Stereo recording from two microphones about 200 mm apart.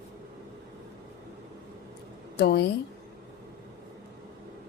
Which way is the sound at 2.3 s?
55° left (ahead or behind).